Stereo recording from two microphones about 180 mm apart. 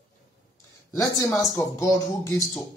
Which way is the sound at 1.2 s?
15° left (ahead or behind).